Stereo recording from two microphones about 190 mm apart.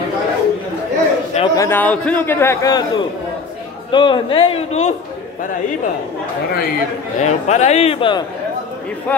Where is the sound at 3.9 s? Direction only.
25° left (ahead or behind).